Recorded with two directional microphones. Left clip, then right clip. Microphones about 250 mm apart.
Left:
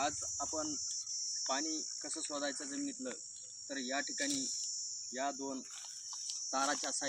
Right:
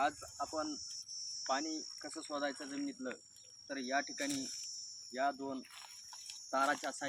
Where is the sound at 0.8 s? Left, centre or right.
Right.